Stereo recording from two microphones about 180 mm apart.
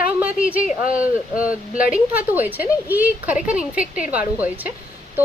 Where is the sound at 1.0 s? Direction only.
5° right (ahead or behind).